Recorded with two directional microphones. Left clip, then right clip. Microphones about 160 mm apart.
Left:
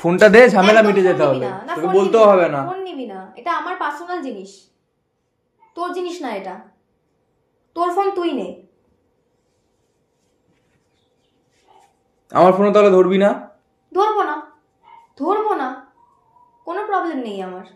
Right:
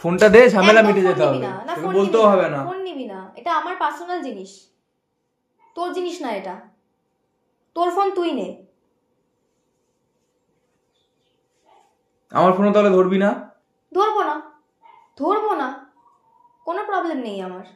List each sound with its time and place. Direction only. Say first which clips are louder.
0.0 s speech: left 2 dB; 20° left (ahead or behind)
1.9 s a man's voice: left 4 dB; 40° left (ahead or behind)
2.7 s a woman's voice: left 1 dB; 30° right (ahead or behind)
5.7 s a woman's voice: left 1 dB; 30° right (ahead or behind)
7.7 s a woman's voice: left 1 dB; 30° right (ahead or behind)
12.3 s a man's voice: left 4 dB; 40° left (ahead or behind)
13.9 s a woman's voice: left 2 dB; 30° right (ahead or behind)
16.6 s a woman's voice: left 2 dB; 30° right (ahead or behind)